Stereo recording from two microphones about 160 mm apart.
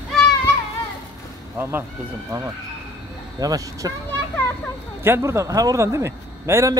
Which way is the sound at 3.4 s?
20° right (ahead or behind).